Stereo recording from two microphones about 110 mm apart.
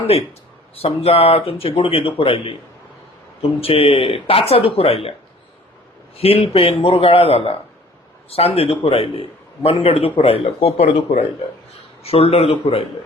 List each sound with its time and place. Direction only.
0.8 s speech: 65° left (ahead or behind)
3.6 s speech: 60° left (ahead or behind)
6.1 s speech: 60° left (ahead or behind)